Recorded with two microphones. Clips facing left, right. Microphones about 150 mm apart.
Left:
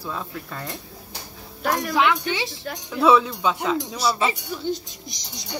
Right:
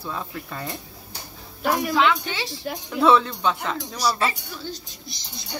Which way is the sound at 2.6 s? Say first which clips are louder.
Right 2 dB; 10° right (ahead or behind).